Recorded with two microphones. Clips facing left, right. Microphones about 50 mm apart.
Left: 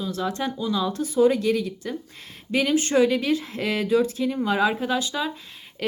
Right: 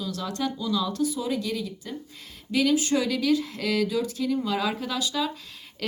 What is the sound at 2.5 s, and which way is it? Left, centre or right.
Speech, left.